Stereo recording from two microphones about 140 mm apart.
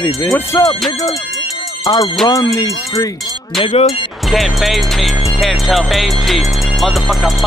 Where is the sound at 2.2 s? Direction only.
25° left (ahead or behind).